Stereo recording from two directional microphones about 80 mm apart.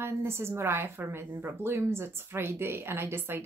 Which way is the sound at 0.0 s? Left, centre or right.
Right.